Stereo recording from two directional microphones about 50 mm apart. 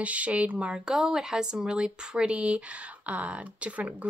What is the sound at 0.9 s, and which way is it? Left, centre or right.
Speech, centre.